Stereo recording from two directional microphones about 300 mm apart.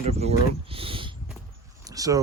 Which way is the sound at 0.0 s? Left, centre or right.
Right.